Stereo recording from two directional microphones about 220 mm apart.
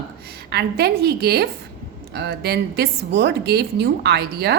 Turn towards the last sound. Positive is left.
turn(degrees=-45)  # may be behind; listen again after turning